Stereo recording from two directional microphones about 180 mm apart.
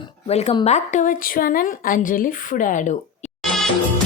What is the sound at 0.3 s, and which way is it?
A woman's voice, 35° left (ahead or behind).